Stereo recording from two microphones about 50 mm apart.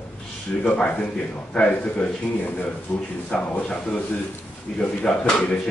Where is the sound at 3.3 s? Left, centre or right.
Centre.